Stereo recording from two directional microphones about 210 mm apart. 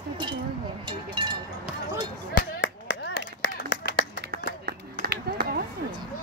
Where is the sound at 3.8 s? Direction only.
50° right (ahead or behind).